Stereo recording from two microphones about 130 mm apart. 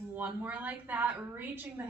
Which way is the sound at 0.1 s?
15° right (ahead or behind).